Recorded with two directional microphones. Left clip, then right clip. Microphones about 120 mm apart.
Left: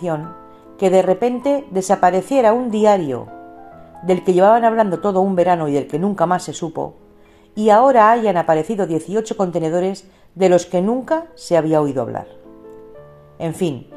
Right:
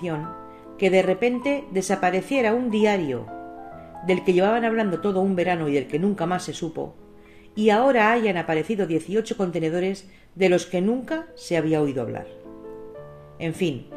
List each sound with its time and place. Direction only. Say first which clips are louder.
0.7 s speech: left 5 dB; 55° left (ahead or behind)
13.4 s speech: left 5 dB; 55° left (ahead or behind)